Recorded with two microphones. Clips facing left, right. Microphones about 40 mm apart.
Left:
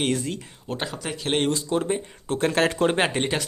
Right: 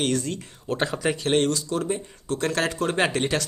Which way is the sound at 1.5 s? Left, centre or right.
Left.